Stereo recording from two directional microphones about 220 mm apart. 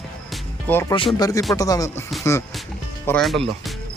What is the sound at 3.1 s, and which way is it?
Speech, 5° left (ahead or behind).